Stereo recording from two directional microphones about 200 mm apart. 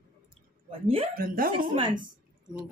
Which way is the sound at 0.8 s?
25° right (ahead or behind).